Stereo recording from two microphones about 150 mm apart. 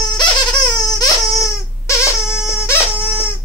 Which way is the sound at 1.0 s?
20° left (ahead or behind).